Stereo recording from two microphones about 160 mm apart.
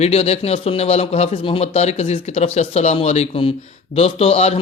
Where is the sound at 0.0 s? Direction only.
40° left (ahead or behind).